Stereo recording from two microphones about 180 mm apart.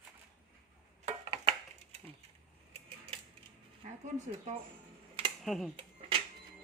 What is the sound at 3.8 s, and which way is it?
Speech, 40° right (ahead or behind).